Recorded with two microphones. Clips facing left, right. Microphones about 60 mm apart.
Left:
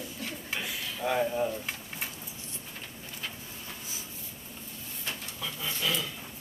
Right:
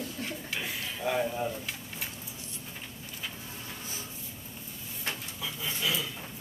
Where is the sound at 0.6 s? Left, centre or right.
Centre.